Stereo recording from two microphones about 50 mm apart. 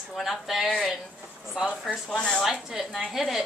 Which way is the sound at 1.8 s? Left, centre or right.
Centre.